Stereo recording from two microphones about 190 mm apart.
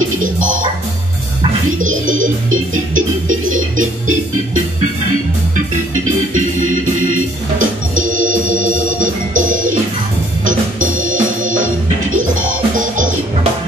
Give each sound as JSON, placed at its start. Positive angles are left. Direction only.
{"t": 0.2, "sound": "music", "side_deg": -45}
{"t": 1.8, "sound": "music", "side_deg": -45}
{"t": 6.0, "sound": "organ", "side_deg": -45}
{"t": 10.4, "sound": "music", "side_deg": -45}
{"t": 12.7, "sound": "music", "side_deg": -45}